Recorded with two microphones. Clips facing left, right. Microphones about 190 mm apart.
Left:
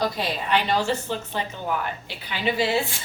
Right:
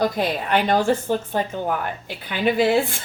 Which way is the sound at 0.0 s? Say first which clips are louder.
Right 4 dB; 50° right (ahead or behind).